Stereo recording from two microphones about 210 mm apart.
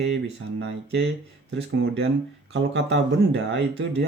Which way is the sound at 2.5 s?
60° right (ahead or behind).